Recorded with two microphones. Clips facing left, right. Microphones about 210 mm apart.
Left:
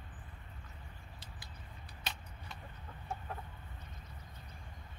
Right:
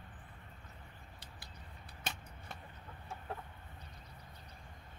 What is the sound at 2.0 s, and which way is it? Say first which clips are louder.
Vehicle: right 2 dB; 50° right (ahead or behind).